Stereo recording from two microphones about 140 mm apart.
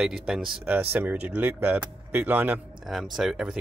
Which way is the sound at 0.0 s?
5° right (ahead or behind).